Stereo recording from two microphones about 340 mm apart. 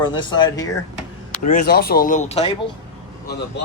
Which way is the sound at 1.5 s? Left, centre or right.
Left.